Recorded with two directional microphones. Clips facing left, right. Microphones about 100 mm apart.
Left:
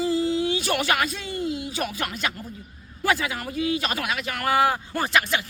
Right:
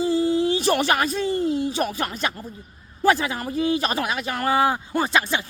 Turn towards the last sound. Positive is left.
turn(degrees=-25)  # may be behind; listen again after turning